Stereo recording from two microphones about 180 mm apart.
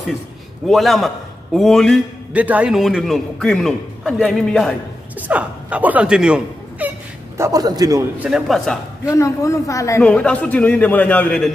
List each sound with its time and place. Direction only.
0.7 s a man's voice: centre (ahead or behind)
2.3 s a man's voice: 10° right (ahead or behind)
5.3 s speech: 10° right (ahead or behind)
7.3 s a man's voice: 15° right (ahead or behind)
8.2 s a man's voice: 5° right (ahead or behind)
9.1 s a man's voice: 15° left (ahead or behind)
10.0 s a man's voice: 5° left (ahead or behind)